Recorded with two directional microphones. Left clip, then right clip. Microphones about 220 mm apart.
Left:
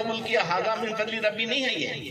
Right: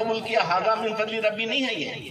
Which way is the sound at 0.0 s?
35° left (ahead or behind).